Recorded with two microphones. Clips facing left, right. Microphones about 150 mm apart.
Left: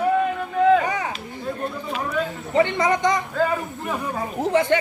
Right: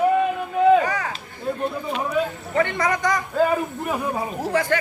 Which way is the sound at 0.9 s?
20° left (ahead or behind).